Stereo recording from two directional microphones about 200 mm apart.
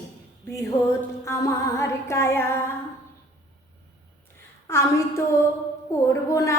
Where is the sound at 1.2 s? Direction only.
15° left (ahead or behind).